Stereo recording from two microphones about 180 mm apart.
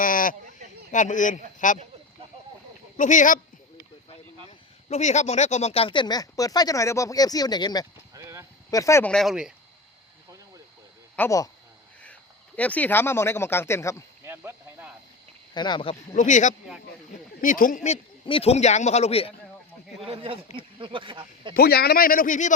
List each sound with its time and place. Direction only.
0.0 s sheep: 50° left (ahead or behind)
0.9 s a man's voice: 45° left (ahead or behind)
3.0 s a man's voice: 45° left (ahead or behind)
4.9 s speech: 40° left (ahead or behind); by 7.9 s 20° left (ahead or behind)
8.1 s clip-clop: 15° right (ahead or behind)
8.7 s speech: 15° left (ahead or behind)
9.1 s speech: centre (ahead or behind)
11.2 s speech: 15° left (ahead or behind)
12.5 s speech: 10° left (ahead or behind)
14.3 s speech: 15° right (ahead or behind)
15.5 s speech: 25° left (ahead or behind)
16.1 s a man's voice: 45° left (ahead or behind)
20.0 s a man's voice: 30° right (ahead or behind)
21.5 s a man's voice: 60° left (ahead or behind); by 22.5 s 45° left (ahead or behind)